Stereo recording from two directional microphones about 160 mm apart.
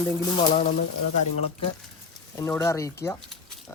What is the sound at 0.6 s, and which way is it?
Speech, 50° left (ahead or behind).